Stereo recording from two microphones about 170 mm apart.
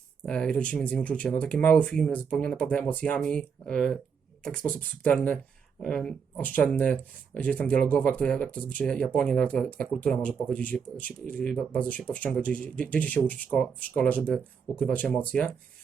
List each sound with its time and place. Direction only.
0.2 s speech: 5° left (ahead or behind)